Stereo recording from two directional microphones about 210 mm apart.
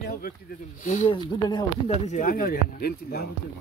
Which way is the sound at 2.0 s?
40° left (ahead or behind).